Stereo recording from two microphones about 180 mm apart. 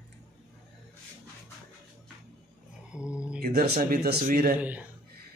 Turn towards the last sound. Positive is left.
turn(degrees=-10)  # may be behind; listen again after turning